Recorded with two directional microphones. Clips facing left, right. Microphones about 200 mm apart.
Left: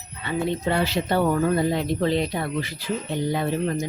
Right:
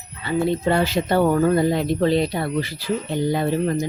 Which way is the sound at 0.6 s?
45° right (ahead or behind).